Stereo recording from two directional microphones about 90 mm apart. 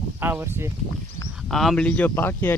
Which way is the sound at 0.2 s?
25° right (ahead or behind).